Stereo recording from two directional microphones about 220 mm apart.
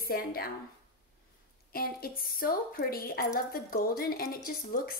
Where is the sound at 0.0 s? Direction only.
45° left (ahead or behind).